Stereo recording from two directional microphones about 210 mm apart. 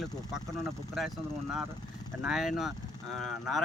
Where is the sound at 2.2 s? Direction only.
Centre (ahead or behind).